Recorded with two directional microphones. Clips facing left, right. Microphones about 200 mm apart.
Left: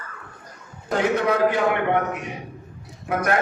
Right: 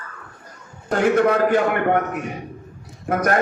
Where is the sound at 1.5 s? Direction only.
45° right (ahead or behind).